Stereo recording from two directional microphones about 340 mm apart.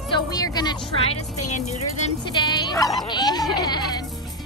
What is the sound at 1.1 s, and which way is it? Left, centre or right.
Speech, left.